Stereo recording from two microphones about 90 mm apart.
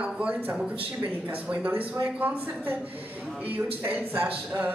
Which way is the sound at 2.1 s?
20° right (ahead or behind).